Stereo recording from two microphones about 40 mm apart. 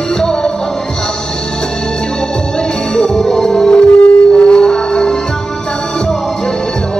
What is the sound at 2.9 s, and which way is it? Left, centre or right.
Music, centre.